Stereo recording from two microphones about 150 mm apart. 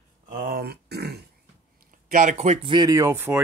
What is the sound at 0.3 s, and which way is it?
Grunt, 70° right (ahead or behind).